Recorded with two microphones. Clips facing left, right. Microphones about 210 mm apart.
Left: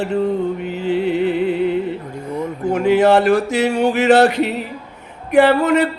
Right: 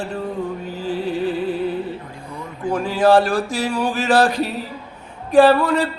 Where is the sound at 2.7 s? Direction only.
20° left (ahead or behind).